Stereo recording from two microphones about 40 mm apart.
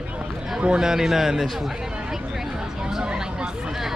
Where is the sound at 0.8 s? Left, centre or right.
Centre.